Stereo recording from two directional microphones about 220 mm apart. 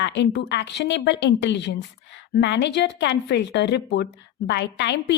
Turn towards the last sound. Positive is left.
turn(degrees=50)  # may be behind; listen again after turning